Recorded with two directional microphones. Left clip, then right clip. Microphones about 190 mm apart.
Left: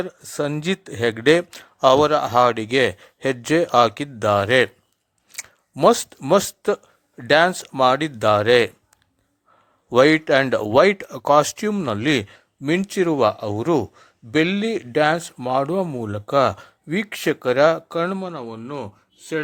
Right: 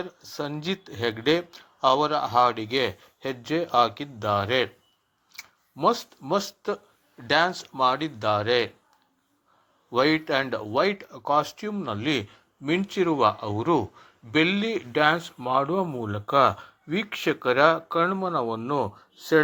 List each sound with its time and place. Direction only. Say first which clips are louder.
0.0 s a man's voice: left 8 dB; 55° left (ahead or behind)
9.9 s speech: left 8 dB; 50° left (ahead or behind)
18.3 s speech: right 5 dB; 5° left (ahead or behind)